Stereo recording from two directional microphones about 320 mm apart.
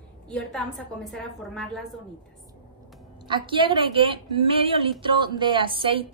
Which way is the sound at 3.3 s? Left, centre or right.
Centre.